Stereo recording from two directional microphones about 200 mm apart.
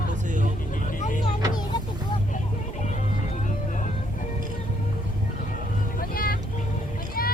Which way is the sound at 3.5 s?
40° left (ahead or behind).